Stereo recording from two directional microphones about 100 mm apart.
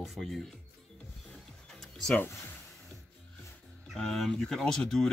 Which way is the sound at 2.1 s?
20° left (ahead or behind).